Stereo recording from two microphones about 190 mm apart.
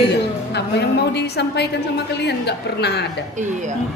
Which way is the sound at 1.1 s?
60° left (ahead or behind).